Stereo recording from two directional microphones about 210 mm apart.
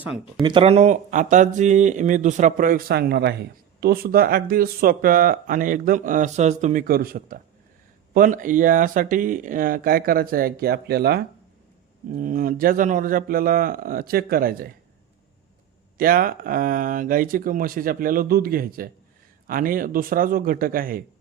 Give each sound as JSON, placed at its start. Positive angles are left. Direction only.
{"t": 0.0, "sound": "speech", "side_deg": -5}
{"t": 0.4, "sound": "speech", "side_deg": -25}
{"t": 16.0, "sound": "speech", "side_deg": -40}